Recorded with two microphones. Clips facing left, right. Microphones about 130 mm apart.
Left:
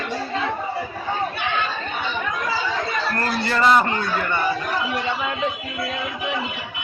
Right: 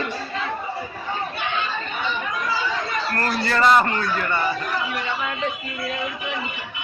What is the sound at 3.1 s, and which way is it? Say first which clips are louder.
Speech: right 2 dB; 20° left (ahead or behind).